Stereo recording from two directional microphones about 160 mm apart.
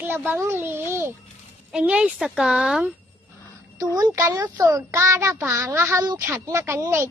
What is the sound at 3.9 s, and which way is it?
A child's voice, 20° right (ahead or behind).